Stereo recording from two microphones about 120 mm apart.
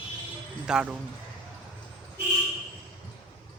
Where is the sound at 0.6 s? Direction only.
10° right (ahead or behind).